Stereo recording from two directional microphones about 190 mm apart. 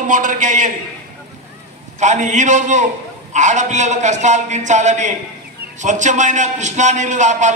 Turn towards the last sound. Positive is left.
turn(degrees=-40)  # may be behind; listen again after turning